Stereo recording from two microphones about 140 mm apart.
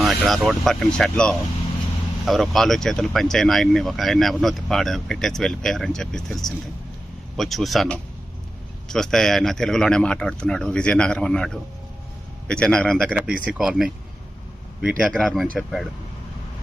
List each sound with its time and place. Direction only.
0.0 s speech: centre (ahead or behind)
13.1 s speech: 10° right (ahead or behind)